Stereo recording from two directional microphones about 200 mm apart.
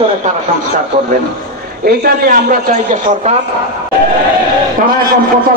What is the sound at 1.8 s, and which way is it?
Speech, 45° right (ahead or behind).